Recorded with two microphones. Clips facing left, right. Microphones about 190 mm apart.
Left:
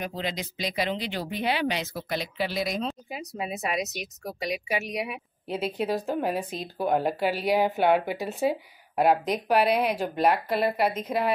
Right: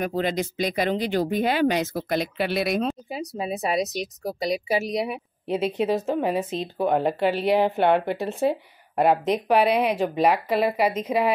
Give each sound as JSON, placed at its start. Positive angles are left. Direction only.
{"t": 0.0, "sound": "speech", "side_deg": -50}
{"t": 3.1, "sound": "a woman's voice", "side_deg": -30}
{"t": 5.5, "sound": "speech", "side_deg": 5}